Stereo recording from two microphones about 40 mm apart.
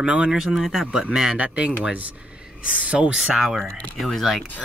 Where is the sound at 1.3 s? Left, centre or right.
Right.